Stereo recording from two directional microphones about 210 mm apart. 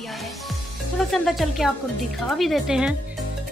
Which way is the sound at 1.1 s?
Centre (ahead or behind).